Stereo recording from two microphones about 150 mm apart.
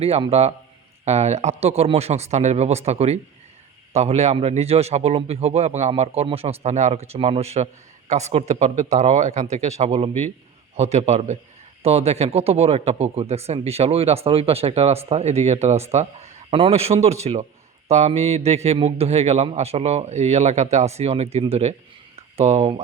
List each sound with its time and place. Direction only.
0.0 s a man's voice: 40° right (ahead or behind)